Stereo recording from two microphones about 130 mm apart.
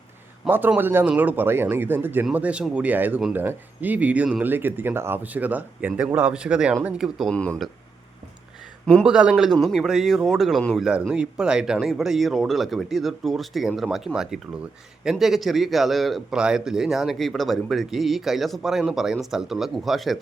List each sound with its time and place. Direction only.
0.4 s a man's voice: 15° right (ahead or behind)
7.3 s speech: 10° left (ahead or behind)
9.0 s a man's voice: 5° right (ahead or behind)